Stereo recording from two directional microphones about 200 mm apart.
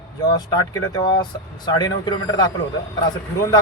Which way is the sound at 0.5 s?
20° left (ahead or behind).